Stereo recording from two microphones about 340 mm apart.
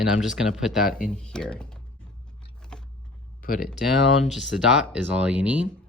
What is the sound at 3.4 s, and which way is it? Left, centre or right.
Speech, left.